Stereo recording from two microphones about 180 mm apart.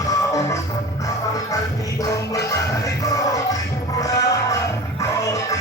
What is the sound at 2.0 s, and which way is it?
Music, 15° left (ahead or behind).